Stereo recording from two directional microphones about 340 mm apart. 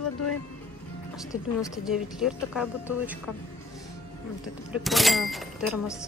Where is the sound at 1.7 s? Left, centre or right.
Centre.